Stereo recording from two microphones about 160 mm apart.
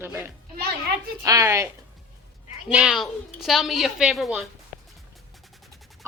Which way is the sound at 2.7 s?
5° right (ahead or behind).